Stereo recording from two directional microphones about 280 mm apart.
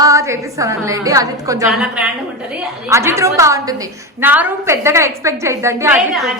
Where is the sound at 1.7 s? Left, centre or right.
Centre.